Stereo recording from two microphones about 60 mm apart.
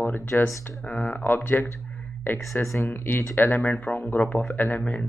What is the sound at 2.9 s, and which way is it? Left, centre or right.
Speech, left.